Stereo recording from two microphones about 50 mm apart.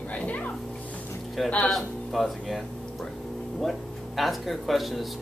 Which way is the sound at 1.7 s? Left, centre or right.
Centre.